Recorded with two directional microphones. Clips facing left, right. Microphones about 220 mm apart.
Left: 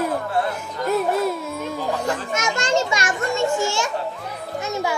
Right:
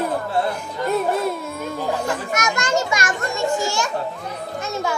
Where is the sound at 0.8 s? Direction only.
Centre (ahead or behind).